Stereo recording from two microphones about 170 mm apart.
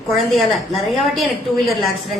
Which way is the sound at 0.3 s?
Centre (ahead or behind).